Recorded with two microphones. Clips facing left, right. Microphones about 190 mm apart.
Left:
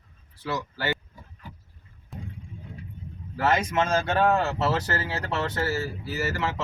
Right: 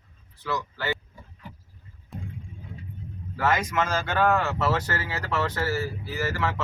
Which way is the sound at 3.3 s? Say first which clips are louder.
Left 1 dB; 30° left (ahead or behind).